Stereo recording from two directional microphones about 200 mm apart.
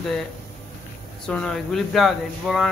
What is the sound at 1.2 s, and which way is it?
Speech, 5° left (ahead or behind).